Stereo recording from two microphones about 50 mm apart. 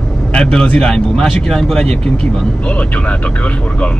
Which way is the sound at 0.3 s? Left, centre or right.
Centre.